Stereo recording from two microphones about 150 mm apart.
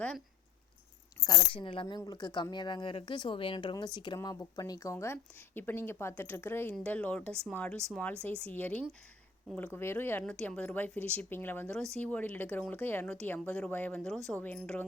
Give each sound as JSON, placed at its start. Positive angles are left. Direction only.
{"t": 1.2, "sound": "speech", "side_deg": 35}